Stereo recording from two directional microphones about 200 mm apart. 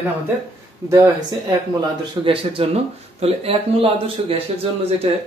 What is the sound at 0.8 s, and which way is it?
Speech, 15° right (ahead or behind).